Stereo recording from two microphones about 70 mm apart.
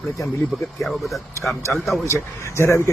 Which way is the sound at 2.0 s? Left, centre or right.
Left.